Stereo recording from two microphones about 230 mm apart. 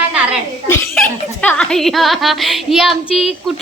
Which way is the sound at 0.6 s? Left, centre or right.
Centre.